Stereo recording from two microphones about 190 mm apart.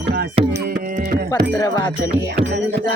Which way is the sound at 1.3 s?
15° left (ahead or behind).